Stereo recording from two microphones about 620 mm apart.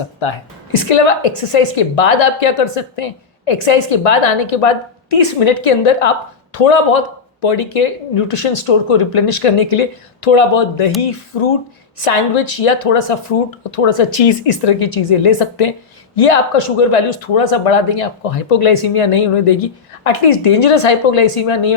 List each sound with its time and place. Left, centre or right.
0.3 s speech: left
7.4 s speech: left
11.0 s speech: left
11.9 s a woman's voice: left
13.7 s speech: left
16.6 s speech: left
20.6 s speech: left
20.8 s speech: left
21.3 s speech: left